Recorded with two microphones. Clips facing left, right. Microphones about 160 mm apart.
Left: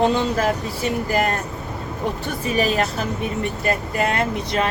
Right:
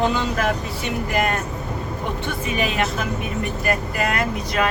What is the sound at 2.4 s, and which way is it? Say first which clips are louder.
Speech: left 3 dB; 35° left (ahead or behind).